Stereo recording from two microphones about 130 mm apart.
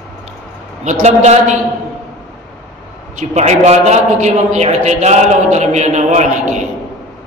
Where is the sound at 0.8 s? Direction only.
65° right (ahead or behind).